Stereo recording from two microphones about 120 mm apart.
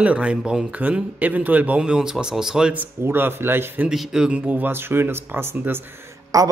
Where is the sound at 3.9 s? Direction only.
5° right (ahead or behind).